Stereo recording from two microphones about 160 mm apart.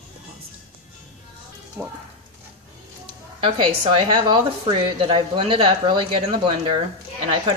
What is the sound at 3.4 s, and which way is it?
A woman's voice, 35° right (ahead or behind).